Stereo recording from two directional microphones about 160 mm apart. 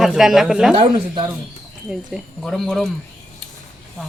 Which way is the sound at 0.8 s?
30° right (ahead or behind).